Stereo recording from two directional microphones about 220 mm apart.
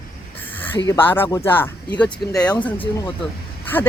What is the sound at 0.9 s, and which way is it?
Speech, 10° left (ahead or behind).